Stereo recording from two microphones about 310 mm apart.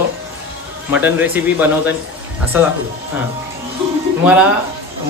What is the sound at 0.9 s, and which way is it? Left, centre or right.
Speech, centre.